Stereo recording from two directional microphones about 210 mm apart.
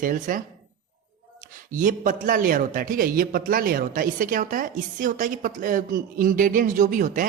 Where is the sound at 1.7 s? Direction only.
40° right (ahead or behind).